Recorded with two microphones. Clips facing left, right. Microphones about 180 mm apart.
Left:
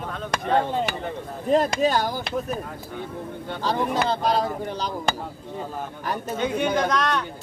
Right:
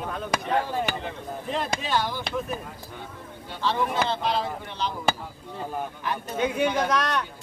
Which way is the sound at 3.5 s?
40° left (ahead or behind).